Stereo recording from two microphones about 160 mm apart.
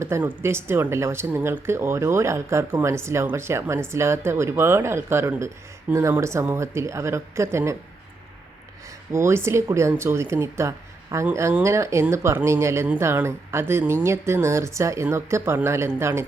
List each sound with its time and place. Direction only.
0.0 s speech: 15° right (ahead or behind)
9.1 s speech: 15° right (ahead or behind)